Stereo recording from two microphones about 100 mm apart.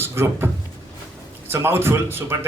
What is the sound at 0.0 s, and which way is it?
Speech, 25° right (ahead or behind).